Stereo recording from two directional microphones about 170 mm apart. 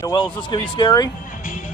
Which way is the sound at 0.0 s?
25° left (ahead or behind).